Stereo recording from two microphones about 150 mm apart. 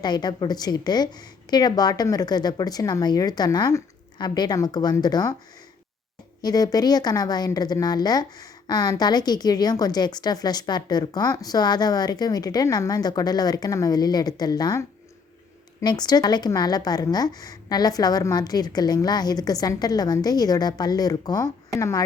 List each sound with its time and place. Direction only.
0.0 s a woman's voice: 30° left (ahead or behind)
6.4 s a woman's voice: 25° left (ahead or behind)